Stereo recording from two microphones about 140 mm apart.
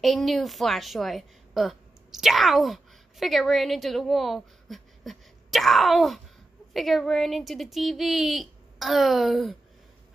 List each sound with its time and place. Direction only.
0.0 s a woman's voice: centre (ahead or behind)